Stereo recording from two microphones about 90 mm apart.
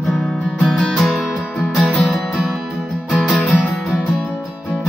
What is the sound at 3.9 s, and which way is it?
Music, centre (ahead or behind).